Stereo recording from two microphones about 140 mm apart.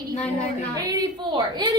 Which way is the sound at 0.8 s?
25° right (ahead or behind).